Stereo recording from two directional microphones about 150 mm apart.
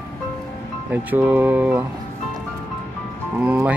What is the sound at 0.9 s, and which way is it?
Speech, 10° right (ahead or behind).